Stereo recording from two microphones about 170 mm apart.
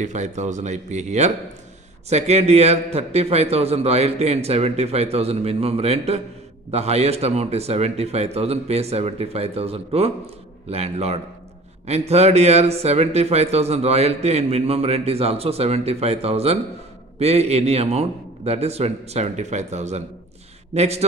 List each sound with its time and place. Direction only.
0.0 s speech: 45° right (ahead or behind)